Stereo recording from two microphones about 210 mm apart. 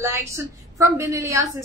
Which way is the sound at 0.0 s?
15° right (ahead or behind).